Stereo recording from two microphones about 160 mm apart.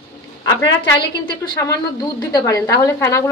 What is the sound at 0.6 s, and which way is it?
A woman's voice, 20° left (ahead or behind).